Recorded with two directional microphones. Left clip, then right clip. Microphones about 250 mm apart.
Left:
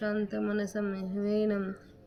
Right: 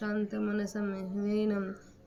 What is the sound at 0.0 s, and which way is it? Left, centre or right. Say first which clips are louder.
Speech: left 2 dB; centre.